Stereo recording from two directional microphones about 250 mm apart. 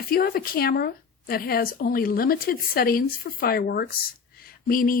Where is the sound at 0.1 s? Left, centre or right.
Left.